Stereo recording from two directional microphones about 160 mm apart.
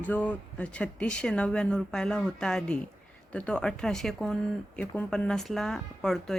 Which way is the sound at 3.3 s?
5° left (ahead or behind).